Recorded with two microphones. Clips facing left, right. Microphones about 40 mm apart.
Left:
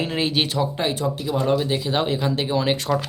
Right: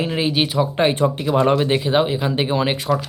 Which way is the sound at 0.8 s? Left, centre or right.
Right.